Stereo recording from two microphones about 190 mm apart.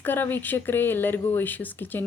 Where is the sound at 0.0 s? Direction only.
10° left (ahead or behind).